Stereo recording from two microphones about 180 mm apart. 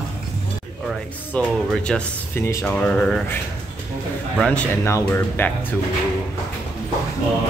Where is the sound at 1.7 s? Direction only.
5° left (ahead or behind).